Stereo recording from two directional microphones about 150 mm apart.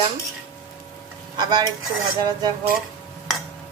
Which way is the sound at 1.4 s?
30° right (ahead or behind).